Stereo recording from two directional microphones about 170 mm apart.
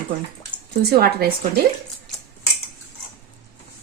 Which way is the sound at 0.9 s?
65° right (ahead or behind).